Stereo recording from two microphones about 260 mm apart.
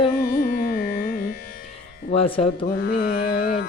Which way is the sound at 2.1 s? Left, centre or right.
Left.